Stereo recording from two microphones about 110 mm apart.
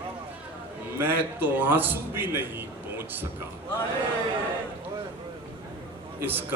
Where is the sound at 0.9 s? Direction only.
20° right (ahead or behind).